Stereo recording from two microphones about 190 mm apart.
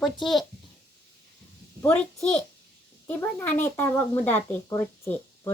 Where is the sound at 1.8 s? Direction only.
5° left (ahead or behind).